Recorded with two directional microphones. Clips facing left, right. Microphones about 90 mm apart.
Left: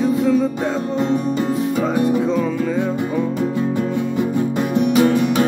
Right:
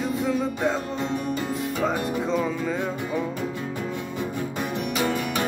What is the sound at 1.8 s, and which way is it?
Music, centre (ahead or behind).